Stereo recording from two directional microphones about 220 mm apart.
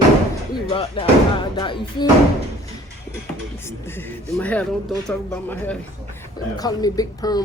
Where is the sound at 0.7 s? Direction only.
25° left (ahead or behind).